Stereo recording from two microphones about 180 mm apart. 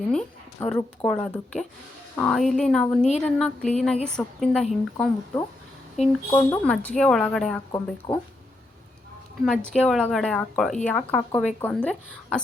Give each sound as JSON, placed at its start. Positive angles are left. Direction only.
{"t": 0.1, "sound": "a woman's voice", "side_deg": 5}
{"t": 3.0, "sound": "a woman's voice", "side_deg": 40}
{"t": 3.2, "sound": "a woman's voice", "side_deg": 5}
{"t": 3.9, "sound": "a woman's voice", "side_deg": 40}
{"t": 4.2, "sound": "a woman's voice", "side_deg": 0}
{"t": 6.0, "sound": "a woman's voice", "side_deg": 35}
{"t": 6.3, "sound": "a woman's voice", "side_deg": 10}
{"t": 7.7, "sound": "speech", "side_deg": 20}
{"t": 9.4, "sound": "a woman's voice", "side_deg": 5}